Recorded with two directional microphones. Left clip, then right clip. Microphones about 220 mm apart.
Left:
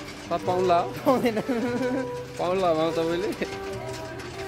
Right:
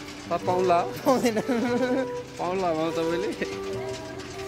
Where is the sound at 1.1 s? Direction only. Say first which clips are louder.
Even; 25° right (ahead or behind).